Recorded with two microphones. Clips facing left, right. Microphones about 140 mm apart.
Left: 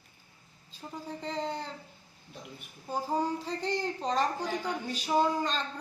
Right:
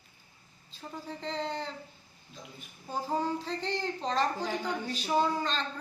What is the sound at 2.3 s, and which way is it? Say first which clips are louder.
Speech: left 2 dB; 65° left (ahead or behind).